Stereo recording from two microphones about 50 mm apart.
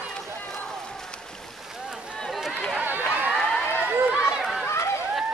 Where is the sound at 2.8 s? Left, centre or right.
Right.